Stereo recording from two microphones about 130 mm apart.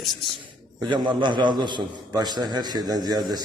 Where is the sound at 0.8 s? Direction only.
35° right (ahead or behind).